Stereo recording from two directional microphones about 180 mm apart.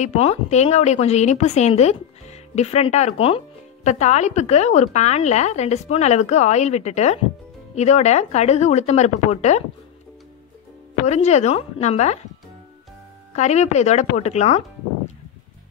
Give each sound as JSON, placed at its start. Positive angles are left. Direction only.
{"t": 0.0, "sound": "a woman's voice", "side_deg": 40}
{"t": 11.1, "sound": "a woman's voice", "side_deg": 40}
{"t": 13.3, "sound": "a woman's voice", "side_deg": 40}